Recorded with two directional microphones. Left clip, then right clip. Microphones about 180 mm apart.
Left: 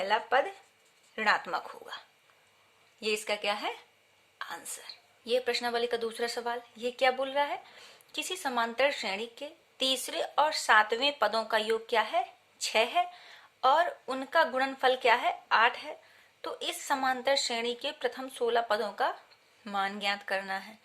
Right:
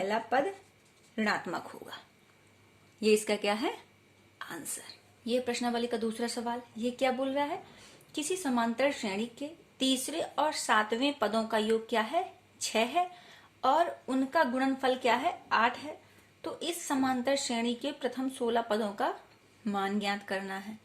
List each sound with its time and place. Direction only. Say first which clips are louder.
0.0 s speech: left 2 dB; 40° left (ahead or behind); by 4.9 s 20° left (ahead or behind)
5.2 s a woman's voice: left 2 dB; 45° left (ahead or behind)